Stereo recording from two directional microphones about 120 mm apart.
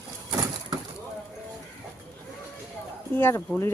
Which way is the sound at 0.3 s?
30° right (ahead or behind).